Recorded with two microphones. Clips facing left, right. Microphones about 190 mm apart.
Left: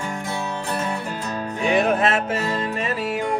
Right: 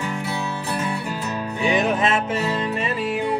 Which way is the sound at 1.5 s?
40° left (ahead or behind).